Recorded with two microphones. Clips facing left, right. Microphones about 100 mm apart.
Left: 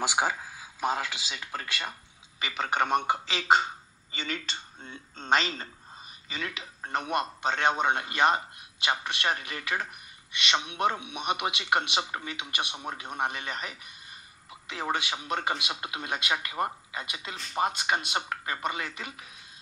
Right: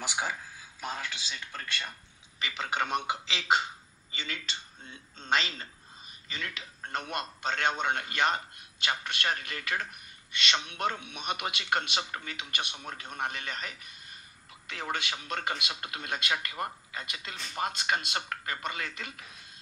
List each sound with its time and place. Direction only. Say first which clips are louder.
0.0 s speech: left 6 dB; 90° left
2.5 s a man's voice: left 5 dB; 45° left (ahead or behind)
5.3 s a man's voice: left 4 dB; 30° left (ahead or behind)
6.3 s a man's voice: left 3 dB; 15° left (ahead or behind)